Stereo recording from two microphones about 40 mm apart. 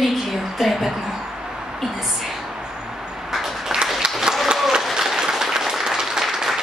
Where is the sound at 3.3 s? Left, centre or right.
Centre.